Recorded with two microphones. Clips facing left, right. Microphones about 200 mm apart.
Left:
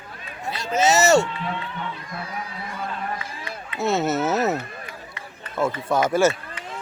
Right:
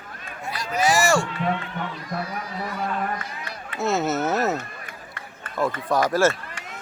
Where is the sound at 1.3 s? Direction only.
45° right (ahead or behind).